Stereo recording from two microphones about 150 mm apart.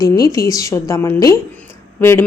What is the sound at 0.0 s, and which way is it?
A woman's voice, 25° left (ahead or behind).